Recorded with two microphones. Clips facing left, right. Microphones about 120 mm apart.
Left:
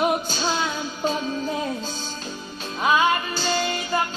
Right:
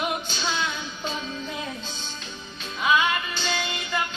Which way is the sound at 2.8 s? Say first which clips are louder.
Left 3 dB; 40° left (ahead or behind).